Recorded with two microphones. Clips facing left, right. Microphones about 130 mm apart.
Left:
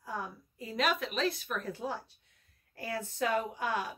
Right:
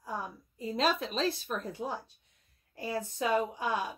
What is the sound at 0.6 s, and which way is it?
Speech, 25° right (ahead or behind).